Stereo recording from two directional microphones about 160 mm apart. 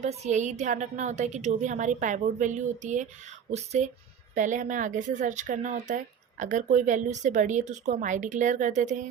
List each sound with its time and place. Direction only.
0.0 s speech: 50° right (ahead or behind)